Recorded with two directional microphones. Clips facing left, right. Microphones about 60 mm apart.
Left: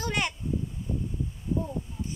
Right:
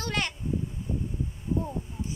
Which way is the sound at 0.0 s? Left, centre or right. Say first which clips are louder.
Left 1 dB; centre.